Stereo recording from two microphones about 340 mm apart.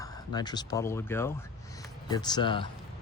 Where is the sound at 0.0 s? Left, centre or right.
Centre.